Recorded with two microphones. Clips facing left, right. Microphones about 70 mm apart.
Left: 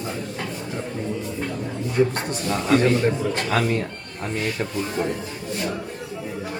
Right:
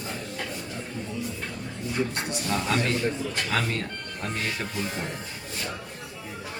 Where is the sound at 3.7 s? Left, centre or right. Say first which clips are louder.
Left 6 dB; centre.